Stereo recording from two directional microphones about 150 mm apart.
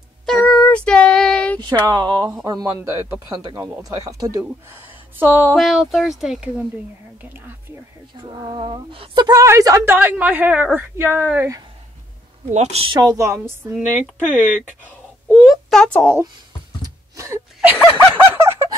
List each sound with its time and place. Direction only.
0.4 s child singing: 10° left (ahead or behind)
1.9 s a woman's voice: 25° right (ahead or behind)
5.6 s a woman's voice: centre (ahead or behind)
8.3 s a woman's voice: 35° right (ahead or behind); by 11.6 s 15° right (ahead or behind)
12.4 s a woman's voice: 45° right (ahead or behind)
13.0 s speech: 20° right (ahead or behind)
13.7 s speech: 5° right (ahead or behind)
15.2 s a sound: centre (ahead or behind)
16.8 s a sound: 20° right (ahead or behind)